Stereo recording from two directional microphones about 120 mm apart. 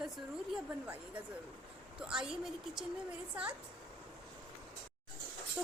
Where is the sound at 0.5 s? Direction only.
10° right (ahead or behind).